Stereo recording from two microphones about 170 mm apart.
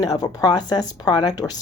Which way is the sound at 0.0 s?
20° left (ahead or behind).